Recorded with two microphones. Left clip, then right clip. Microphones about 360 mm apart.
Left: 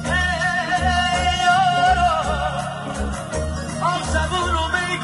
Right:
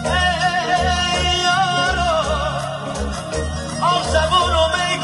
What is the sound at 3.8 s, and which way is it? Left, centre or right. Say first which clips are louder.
Music: right 5 dB; centre.